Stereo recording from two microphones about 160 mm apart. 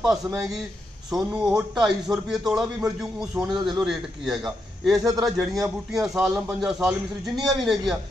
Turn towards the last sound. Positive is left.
turn(degrees=0)  # may be behind; listen again after turning